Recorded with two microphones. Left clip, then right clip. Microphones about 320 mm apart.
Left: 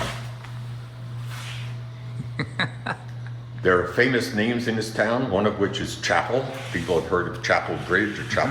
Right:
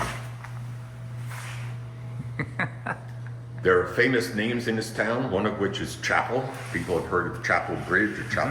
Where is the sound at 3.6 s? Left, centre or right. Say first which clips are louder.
Left 1 dB; left.